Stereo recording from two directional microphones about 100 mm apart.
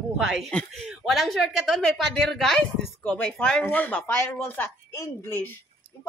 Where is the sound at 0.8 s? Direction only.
Centre (ahead or behind).